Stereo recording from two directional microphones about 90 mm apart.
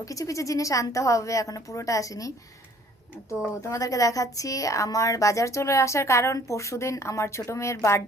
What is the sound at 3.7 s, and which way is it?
A woman's voice, 40° left (ahead or behind).